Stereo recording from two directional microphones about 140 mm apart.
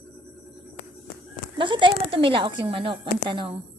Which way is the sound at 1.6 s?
35° right (ahead or behind).